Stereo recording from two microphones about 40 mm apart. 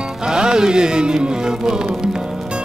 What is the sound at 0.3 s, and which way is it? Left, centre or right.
Music, centre.